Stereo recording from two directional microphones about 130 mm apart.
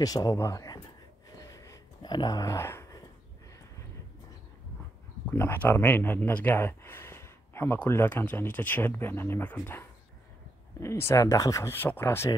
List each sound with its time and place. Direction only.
0.0 s speech: 30° left (ahead or behind)
1.4 s gasp: 25° left (ahead or behind)
2.1 s speech: 30° left (ahead or behind)
5.3 s speech: 15° left (ahead or behind)